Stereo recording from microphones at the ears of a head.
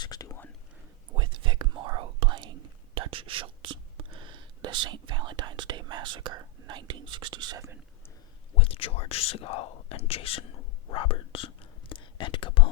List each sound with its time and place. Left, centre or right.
0.0 s whispering: left
1.1 s whispering: right
8.5 s whispering: left